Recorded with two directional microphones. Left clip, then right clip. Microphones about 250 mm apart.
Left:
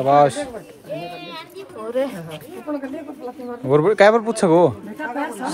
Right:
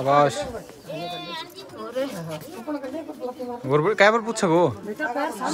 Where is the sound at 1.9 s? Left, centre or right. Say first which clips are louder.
Left 6 dB; left.